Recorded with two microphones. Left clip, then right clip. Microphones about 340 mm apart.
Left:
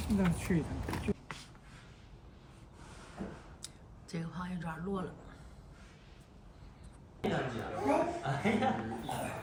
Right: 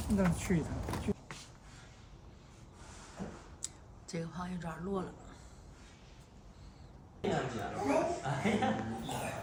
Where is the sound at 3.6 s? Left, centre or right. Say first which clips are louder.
Right 3 dB; centre.